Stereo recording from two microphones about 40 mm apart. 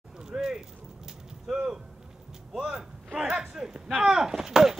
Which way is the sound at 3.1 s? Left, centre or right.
Right.